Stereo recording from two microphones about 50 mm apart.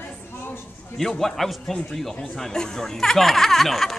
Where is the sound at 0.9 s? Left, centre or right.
Centre.